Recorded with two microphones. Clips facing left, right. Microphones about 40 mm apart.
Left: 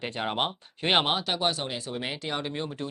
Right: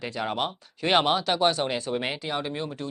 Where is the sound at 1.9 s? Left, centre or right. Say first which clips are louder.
Right 5 dB; centre.